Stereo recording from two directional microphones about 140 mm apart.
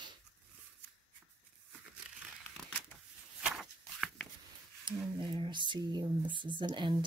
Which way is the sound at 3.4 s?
Centre (ahead or behind).